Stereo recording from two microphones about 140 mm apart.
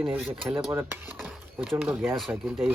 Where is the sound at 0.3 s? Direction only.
15° right (ahead or behind).